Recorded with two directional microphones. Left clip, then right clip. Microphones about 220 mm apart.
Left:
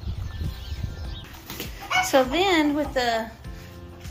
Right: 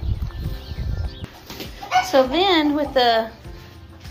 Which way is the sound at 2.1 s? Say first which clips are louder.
Right 3 dB; 5° left (ahead or behind).